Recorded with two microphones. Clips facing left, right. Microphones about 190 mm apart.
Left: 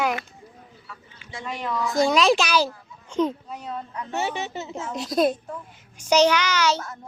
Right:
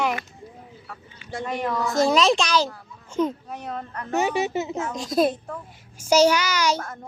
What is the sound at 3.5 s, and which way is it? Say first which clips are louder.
Speech: even; 75° right (ahead or behind).